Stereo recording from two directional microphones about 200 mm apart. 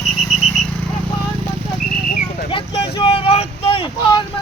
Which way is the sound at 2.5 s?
25° left (ahead or behind).